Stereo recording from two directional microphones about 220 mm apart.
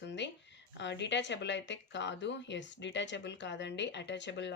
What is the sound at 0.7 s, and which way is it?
Speech, 55° left (ahead or behind).